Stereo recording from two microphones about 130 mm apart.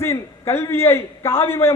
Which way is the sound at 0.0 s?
20° left (ahead or behind).